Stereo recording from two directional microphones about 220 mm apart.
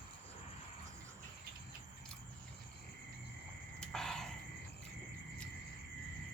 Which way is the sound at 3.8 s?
Centre (ahead or behind).